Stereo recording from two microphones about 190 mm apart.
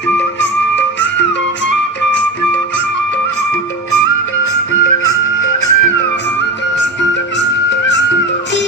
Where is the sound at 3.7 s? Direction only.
90° left.